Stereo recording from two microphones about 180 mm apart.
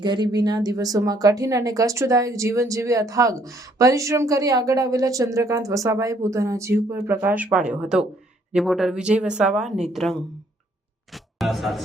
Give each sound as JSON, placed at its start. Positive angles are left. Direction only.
{"t": 0.0, "sound": "a woman's voice", "side_deg": -25}
{"t": 11.1, "sound": "music", "side_deg": 0}